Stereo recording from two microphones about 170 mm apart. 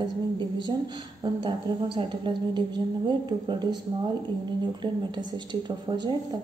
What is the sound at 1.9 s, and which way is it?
Speech, 30° right (ahead or behind).